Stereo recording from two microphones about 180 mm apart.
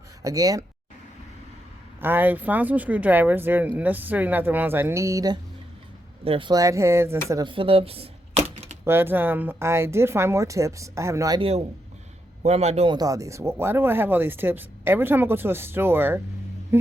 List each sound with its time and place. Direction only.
0.2 s speech: 20° right (ahead or behind)
2.0 s speech: 10° right (ahead or behind)
7.3 s a sound: 25° right (ahead or behind)
8.8 s speech: 10° right (ahead or behind)
11.3 s a man's voice: 35° right (ahead or behind); by 16.2 s 10° right (ahead or behind)